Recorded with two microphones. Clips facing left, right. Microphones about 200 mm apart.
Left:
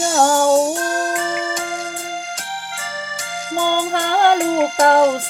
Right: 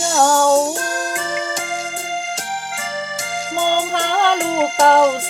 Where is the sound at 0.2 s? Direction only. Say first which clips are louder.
Even; 15° left (ahead or behind).